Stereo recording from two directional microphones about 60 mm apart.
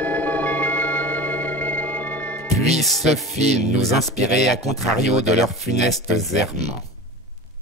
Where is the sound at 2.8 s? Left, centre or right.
Centre.